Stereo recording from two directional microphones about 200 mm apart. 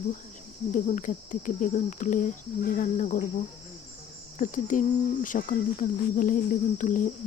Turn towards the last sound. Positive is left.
turn(degrees=40)  # may be behind; listen again after turning